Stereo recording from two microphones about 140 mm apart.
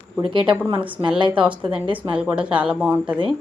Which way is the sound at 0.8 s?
10° right (ahead or behind).